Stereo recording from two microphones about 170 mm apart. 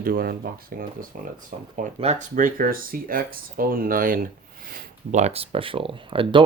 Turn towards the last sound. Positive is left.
turn(degrees=-30)  # may be behind; listen again after turning